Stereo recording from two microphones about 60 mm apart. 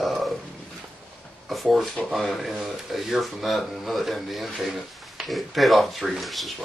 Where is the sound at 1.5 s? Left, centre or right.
Centre.